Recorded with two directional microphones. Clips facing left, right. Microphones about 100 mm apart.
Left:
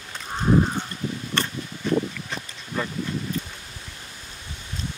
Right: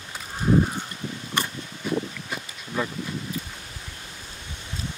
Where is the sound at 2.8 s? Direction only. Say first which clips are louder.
Right 1 dB; 10° right (ahead or behind).